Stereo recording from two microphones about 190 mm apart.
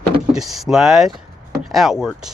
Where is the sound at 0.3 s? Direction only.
Centre (ahead or behind).